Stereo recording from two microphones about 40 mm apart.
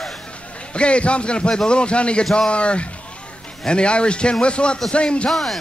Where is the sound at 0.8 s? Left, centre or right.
Left.